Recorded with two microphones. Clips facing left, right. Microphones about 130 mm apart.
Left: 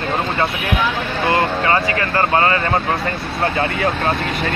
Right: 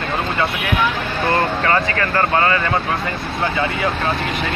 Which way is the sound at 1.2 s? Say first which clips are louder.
Left 1 dB; 20° left (ahead or behind).